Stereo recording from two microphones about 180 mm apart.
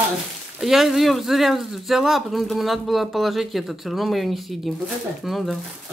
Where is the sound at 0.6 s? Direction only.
Centre (ahead or behind).